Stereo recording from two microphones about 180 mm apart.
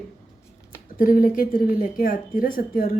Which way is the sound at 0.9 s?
50° left (ahead or behind).